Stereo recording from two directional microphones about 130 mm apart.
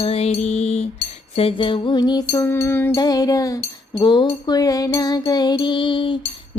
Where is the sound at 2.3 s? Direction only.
20° left (ahead or behind).